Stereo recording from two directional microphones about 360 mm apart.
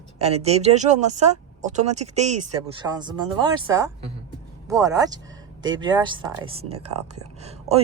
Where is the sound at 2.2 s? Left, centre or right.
Right.